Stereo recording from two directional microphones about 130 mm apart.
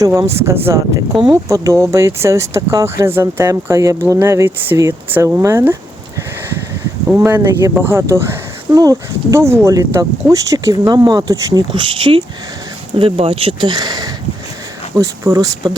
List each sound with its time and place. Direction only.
0.0 s speech: 20° right (ahead or behind)
7.2 s speech: 20° right (ahead or behind)
11.7 s speech: 40° right (ahead or behind)